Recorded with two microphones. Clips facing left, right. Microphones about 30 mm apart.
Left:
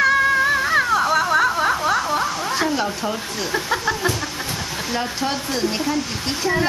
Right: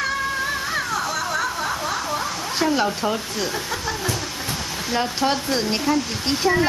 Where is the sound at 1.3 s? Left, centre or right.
Left.